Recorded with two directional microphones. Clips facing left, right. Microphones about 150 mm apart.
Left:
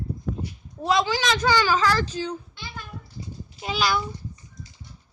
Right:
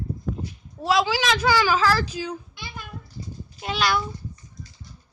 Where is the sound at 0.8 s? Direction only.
5° right (ahead or behind).